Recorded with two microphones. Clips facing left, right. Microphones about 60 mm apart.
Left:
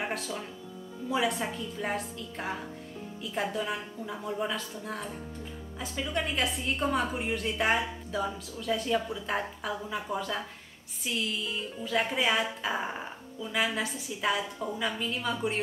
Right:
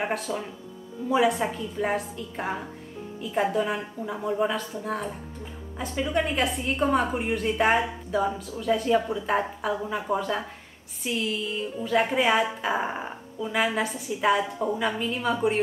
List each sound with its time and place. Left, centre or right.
0.3 s speech: centre
1.1 s a woman's voice: centre